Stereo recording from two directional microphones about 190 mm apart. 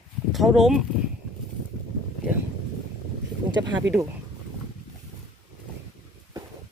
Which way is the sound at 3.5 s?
20° right (ahead or behind).